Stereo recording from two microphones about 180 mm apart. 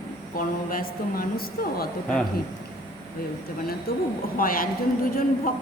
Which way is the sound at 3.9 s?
60° left (ahead or behind).